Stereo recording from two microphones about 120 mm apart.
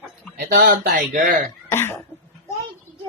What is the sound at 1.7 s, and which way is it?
Cough, 20° left (ahead or behind).